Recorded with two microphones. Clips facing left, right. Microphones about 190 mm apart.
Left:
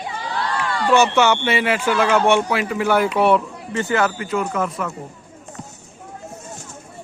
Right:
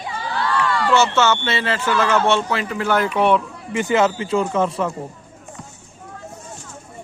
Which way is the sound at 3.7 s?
15° right (ahead or behind).